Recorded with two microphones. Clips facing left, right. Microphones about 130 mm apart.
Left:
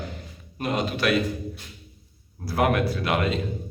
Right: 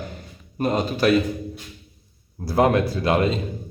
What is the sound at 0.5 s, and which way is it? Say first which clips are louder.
Speech: right 4 dB; 40° right (ahead or behind).